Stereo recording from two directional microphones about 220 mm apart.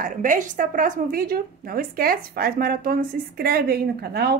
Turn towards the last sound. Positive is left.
turn(degrees=-45)  # may be behind; listen again after turning